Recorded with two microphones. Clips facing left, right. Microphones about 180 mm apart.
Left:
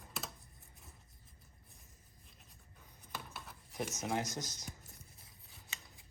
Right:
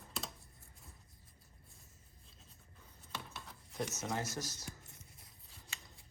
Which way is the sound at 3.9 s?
15° left (ahead or behind).